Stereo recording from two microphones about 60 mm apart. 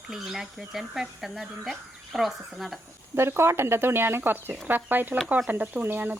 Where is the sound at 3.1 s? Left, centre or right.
Right.